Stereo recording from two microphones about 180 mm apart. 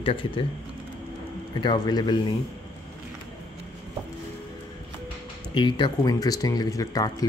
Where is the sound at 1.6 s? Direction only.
25° left (ahead or behind).